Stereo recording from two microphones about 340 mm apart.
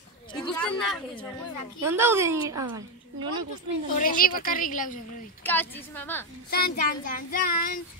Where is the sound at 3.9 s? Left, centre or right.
Left.